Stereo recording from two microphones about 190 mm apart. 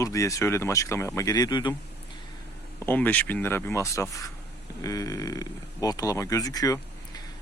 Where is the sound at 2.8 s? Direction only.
10° left (ahead or behind).